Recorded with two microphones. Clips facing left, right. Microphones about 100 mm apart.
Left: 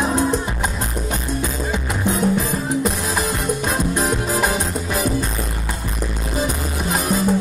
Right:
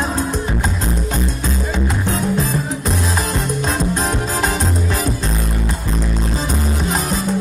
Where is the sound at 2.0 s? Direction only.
15° left (ahead or behind).